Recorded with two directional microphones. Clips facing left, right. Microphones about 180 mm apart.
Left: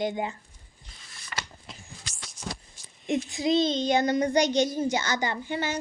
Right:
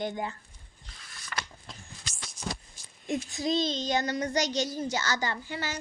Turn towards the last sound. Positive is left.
turn(degrees=20)  # may be behind; listen again after turning